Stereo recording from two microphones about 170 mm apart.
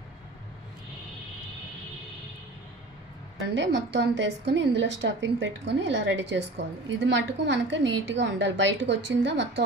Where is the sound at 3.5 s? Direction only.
90° right.